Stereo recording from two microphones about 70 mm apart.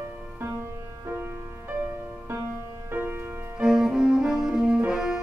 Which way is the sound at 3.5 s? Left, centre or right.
Centre.